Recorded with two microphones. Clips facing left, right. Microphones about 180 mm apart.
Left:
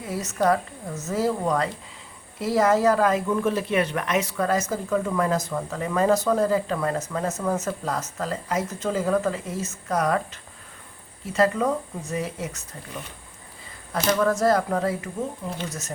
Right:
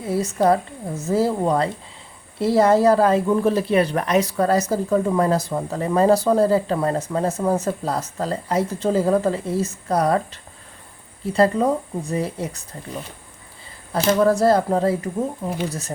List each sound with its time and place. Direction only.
0.0 s a woman's voice: 30° right (ahead or behind)
11.3 s a woman's voice: 35° right (ahead or behind)